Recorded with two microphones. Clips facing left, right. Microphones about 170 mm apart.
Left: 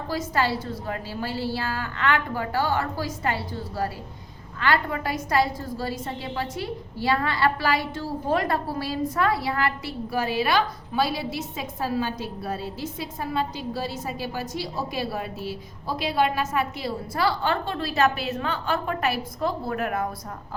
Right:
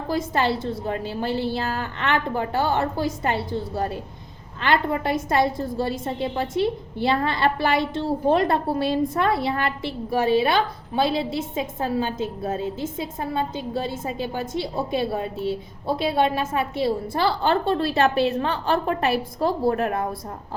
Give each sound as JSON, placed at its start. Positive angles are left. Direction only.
{"t": 0.1, "sound": "a woman's voice", "side_deg": -25}